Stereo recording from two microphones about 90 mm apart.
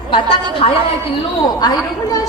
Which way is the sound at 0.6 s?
90° left.